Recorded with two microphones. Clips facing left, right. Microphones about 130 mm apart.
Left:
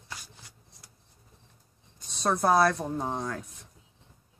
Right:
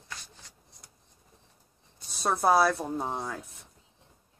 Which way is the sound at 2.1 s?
5° right (ahead or behind).